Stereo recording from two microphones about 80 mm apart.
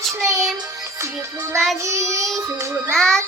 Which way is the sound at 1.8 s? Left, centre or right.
Right.